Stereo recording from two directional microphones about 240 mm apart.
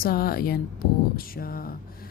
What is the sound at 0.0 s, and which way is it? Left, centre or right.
Speech, left.